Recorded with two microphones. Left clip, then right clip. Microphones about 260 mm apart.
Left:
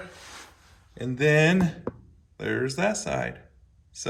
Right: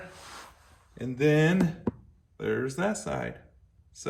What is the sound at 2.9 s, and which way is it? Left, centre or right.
Speech, centre.